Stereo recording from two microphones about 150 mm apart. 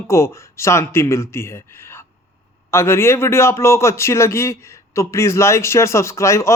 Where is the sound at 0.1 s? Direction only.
20° left (ahead or behind).